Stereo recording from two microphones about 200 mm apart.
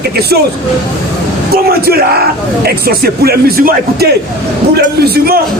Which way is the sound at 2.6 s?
50° right (ahead or behind).